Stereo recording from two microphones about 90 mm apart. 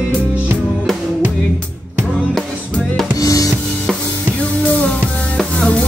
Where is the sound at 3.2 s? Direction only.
40° left (ahead or behind).